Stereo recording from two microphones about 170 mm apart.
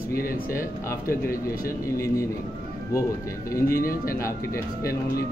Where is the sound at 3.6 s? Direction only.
60° left (ahead or behind).